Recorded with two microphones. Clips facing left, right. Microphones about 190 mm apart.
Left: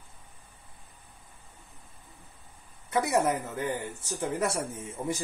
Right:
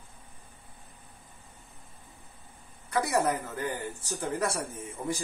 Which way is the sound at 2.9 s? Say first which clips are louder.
Left 1 dB; 20° left (ahead or behind).